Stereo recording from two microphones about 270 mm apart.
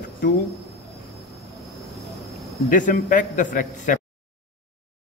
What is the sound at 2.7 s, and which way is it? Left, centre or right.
A man's voice, left.